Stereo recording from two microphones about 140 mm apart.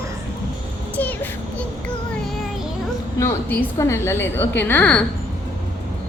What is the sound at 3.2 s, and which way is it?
A woman's voice, 15° left (ahead or behind).